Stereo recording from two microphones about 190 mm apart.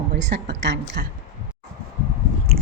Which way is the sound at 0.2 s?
65° right (ahead or behind).